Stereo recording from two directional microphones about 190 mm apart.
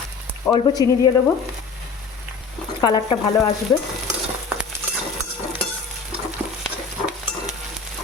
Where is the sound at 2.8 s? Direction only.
20° left (ahead or behind).